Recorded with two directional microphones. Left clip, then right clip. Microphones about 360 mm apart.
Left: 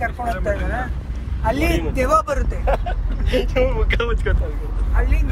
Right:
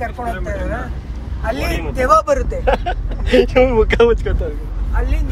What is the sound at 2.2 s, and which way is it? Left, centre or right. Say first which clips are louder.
Speech: right 7 dB; right.